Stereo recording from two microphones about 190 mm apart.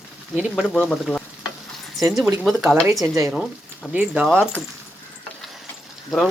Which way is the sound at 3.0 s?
15° right (ahead or behind).